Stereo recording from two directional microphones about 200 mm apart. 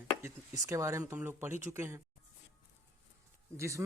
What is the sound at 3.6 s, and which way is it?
Speech, 15° right (ahead or behind).